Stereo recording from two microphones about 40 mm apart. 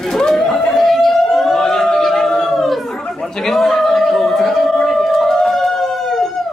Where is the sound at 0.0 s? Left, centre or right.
Centre.